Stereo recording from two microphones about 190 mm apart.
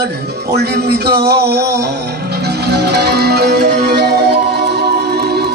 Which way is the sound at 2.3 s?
60° right (ahead or behind).